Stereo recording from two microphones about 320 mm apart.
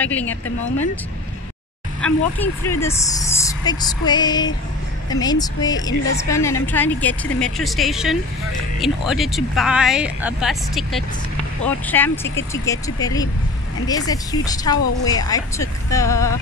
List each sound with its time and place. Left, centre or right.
0.0 s a woman's voice: centre
2.0 s a woman's voice: centre